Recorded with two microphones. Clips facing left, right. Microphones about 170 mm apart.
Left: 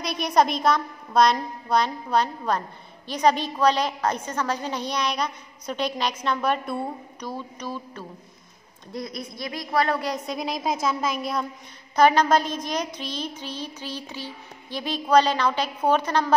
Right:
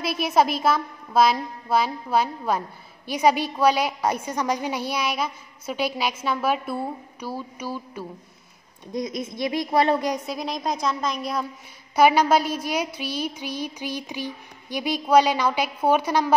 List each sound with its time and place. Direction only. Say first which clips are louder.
0.0 s a woman's voice: right 1 dB; 5° right (ahead or behind)
8.9 s a woman's voice: right 5 dB; 20° right (ahead or behind)
10.2 s a woman's voice: even; centre (ahead or behind)